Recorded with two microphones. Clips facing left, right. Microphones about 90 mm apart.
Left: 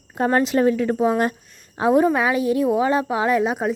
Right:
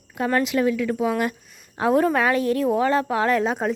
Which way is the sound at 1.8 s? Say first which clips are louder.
Left 2 dB; 15° left (ahead or behind).